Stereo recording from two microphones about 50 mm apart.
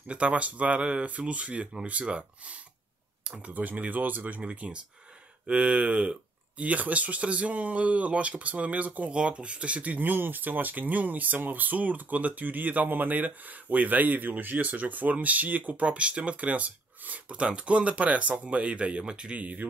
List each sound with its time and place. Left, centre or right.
0.1 s speech: right